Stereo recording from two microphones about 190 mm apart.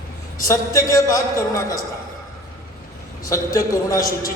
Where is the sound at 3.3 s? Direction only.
15° left (ahead or behind).